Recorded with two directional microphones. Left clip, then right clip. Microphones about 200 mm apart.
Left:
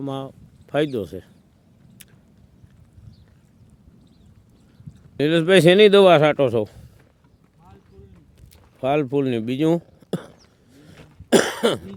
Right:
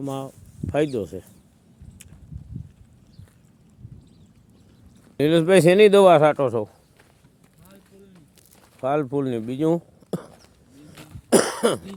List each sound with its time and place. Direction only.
0.0 s speech: 15° left (ahead or behind)
5.1 s speech: 5° left (ahead or behind); by 6.7 s 40° left (ahead or behind)
8.8 s speech: 30° left (ahead or behind)
10.9 s cough: 65° right (ahead or behind)
11.3 s cough: 15° left (ahead or behind)